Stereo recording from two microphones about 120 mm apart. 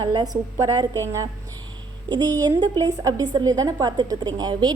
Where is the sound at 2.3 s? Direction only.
35° right (ahead or behind).